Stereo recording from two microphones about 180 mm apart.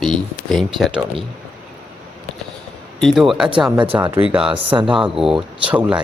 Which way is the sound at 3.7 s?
25° right (ahead or behind).